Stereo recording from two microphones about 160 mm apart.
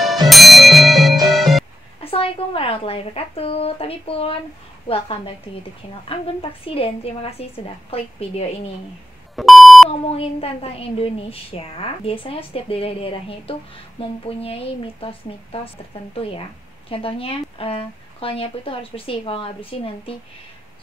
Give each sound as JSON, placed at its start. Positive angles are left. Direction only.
{"t": 0.3, "sound": "music", "side_deg": 0}
{"t": 2.0, "sound": "speech", "side_deg": 35}
{"t": 9.3, "sound": "beep", "side_deg": 0}
{"t": 9.8, "sound": "speech", "side_deg": 35}